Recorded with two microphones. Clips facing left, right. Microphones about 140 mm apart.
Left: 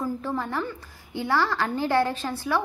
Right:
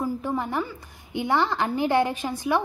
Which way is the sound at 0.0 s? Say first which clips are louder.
Right 2 dB; 15° right (ahead or behind).